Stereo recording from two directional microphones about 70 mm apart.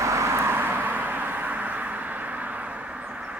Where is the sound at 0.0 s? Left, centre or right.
Right.